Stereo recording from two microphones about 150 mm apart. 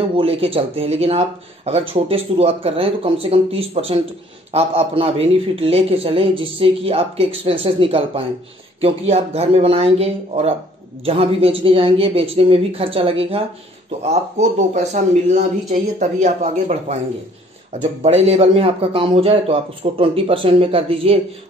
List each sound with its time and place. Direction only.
0.2 s speech: 40° right (ahead or behind)
14.7 s speech: 50° right (ahead or behind)
18.0 s speech: 45° right (ahead or behind)